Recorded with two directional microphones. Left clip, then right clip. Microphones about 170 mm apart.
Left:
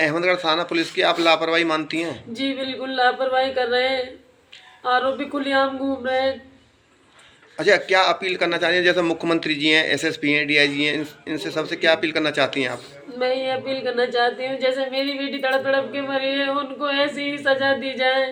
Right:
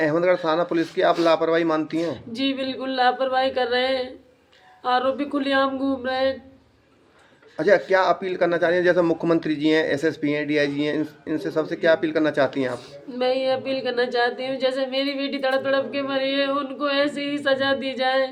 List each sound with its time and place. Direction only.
0.0 s a man's voice: 55° right (ahead or behind)
2.0 s speech: 35° right (ahead or behind)
7.6 s a man's voice: 55° right (ahead or behind)
12.7 s speech: 30° right (ahead or behind)